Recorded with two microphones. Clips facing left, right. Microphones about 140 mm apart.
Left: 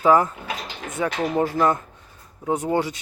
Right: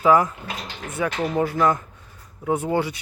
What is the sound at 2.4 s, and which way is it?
Speech, 20° left (ahead or behind).